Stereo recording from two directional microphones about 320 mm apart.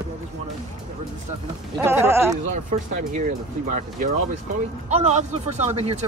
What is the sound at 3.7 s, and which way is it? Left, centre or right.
Speech, right.